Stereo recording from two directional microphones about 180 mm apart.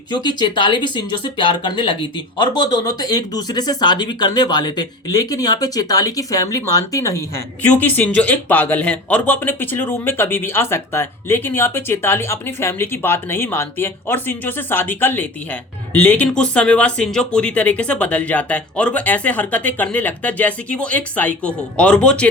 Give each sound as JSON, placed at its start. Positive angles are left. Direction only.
{"t": 0.1, "sound": "speech", "side_deg": 25}